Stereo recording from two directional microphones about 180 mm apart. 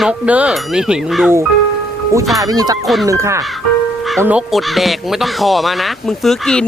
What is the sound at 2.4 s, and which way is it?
Speech, 20° right (ahead or behind).